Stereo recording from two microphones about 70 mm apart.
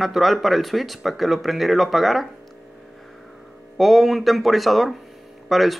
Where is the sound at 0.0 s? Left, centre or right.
Centre.